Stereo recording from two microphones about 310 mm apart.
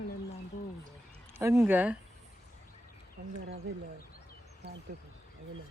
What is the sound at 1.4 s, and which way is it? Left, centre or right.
Speech, centre.